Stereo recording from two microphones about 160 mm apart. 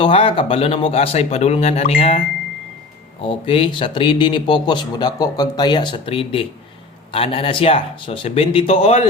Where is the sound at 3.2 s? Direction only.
35° left (ahead or behind).